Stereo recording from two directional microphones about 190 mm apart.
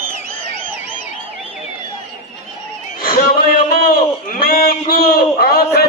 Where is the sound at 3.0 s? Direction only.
50° left (ahead or behind).